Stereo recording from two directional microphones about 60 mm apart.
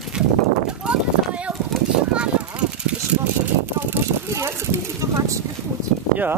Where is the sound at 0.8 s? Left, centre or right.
Centre.